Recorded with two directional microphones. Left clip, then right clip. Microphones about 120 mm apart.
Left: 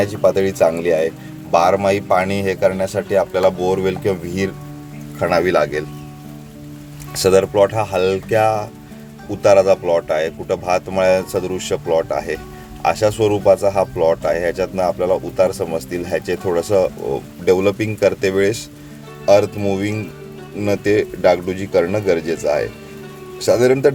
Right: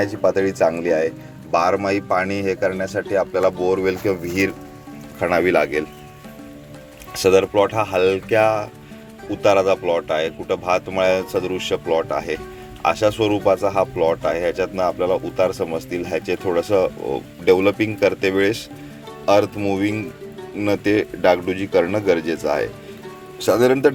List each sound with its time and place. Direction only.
0.0 s speech: 5° left (ahead or behind)
4.1 s speech: centre (ahead or behind)
7.2 s speech: 20° left (ahead or behind)